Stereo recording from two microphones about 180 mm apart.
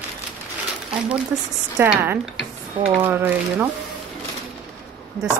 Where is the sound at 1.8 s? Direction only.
10° right (ahead or behind).